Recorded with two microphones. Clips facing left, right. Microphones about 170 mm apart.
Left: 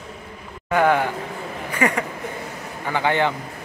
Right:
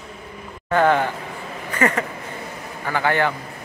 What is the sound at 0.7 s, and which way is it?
Speech, 10° left (ahead or behind).